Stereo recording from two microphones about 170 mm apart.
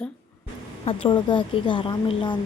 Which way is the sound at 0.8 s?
30° left (ahead or behind).